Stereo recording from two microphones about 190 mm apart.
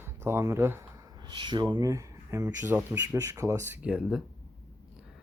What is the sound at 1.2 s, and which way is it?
Speech, 25° right (ahead or behind).